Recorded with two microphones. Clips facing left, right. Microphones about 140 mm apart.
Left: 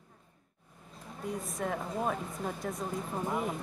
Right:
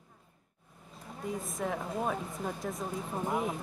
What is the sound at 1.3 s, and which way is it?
Speech, centre (ahead or behind).